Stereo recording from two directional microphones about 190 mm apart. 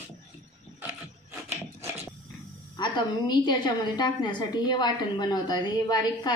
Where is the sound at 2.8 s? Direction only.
20° left (ahead or behind).